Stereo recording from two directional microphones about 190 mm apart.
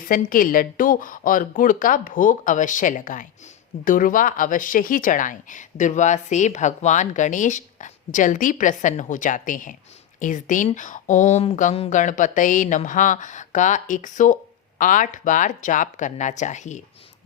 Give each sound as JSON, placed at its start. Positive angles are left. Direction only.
{"t": 0.0, "sound": "speech", "side_deg": 45}